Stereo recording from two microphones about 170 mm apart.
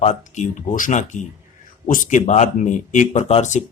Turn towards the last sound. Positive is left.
turn(degrees=40)  # may be behind; listen again after turning